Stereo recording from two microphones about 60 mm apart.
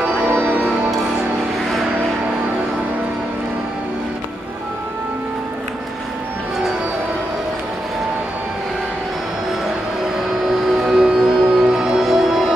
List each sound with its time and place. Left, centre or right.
0.3 s music: right
10.9 s music: centre